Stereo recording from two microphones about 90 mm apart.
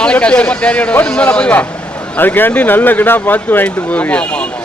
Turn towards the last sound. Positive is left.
turn(degrees=15)  # may be behind; listen again after turning